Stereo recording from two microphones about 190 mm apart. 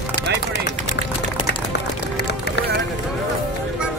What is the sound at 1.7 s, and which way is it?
Run, 55° left (ahead or behind).